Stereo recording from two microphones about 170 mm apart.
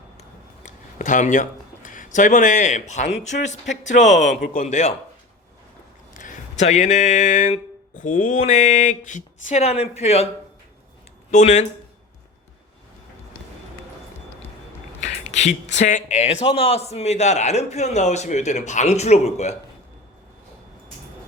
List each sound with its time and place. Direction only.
0.2 s a sound: 45° left (ahead or behind)
3.2 s speech: 45° left (ahead or behind)
4.4 s a man's voice: 65° left (ahead or behind)
4.6 s a man's voice: 40° left (ahead or behind)
6.1 s speech: 50° left (ahead or behind)
11.3 s speech: 45° left (ahead or behind)
15.0 s a man's voice: 45° left (ahead or behind)